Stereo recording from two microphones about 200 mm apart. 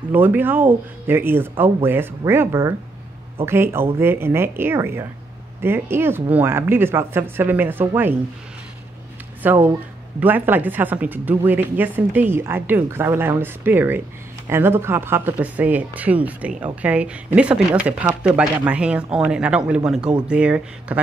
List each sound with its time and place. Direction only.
0.1 s speech: 10° right (ahead or behind)
9.4 s speech: 10° right (ahead or behind)